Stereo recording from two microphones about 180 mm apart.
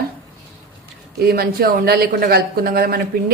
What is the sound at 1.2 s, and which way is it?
Speech, 60° right (ahead or behind).